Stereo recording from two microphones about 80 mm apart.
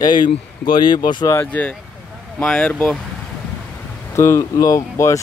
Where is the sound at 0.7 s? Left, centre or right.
Left.